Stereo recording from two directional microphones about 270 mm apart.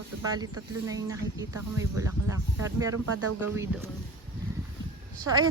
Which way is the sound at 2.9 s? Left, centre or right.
Right.